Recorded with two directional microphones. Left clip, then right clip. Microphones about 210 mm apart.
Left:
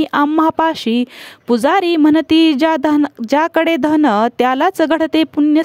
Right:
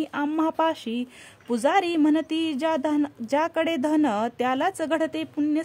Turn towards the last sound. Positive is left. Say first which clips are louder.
# left 13 dB
turn(degrees=40)  # may be behind; listen again after turning